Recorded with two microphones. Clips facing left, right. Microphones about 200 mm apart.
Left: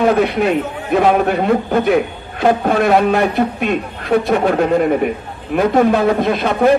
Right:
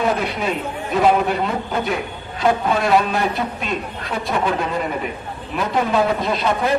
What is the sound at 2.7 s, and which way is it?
A man's voice, 60° left (ahead or behind).